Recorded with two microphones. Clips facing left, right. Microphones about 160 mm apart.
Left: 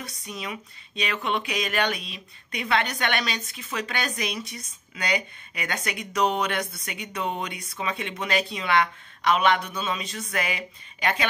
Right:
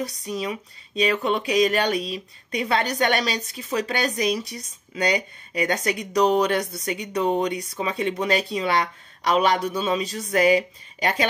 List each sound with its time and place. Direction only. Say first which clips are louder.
0.0 s speech: right 8 dB; 35° right (ahead or behind)